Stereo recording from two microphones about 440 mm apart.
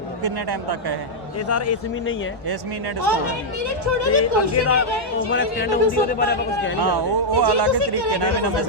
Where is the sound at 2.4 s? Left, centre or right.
Right.